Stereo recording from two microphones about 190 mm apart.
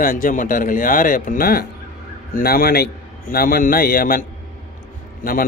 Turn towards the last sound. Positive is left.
turn(degrees=50)  # may be behind; listen again after turning